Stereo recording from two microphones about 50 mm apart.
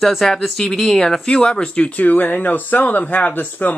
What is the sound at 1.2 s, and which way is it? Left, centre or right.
Speech, left.